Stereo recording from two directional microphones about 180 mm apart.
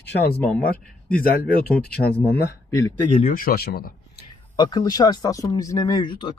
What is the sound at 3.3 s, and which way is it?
Speech, 55° left (ahead or behind).